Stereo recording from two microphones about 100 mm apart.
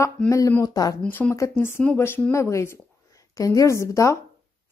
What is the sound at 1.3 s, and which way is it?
A woman's voice, 25° left (ahead or behind).